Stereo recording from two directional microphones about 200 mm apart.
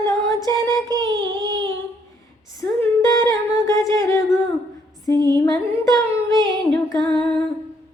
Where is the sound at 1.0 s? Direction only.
70° right (ahead or behind).